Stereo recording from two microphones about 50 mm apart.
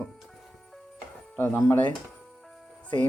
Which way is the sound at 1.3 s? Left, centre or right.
Left.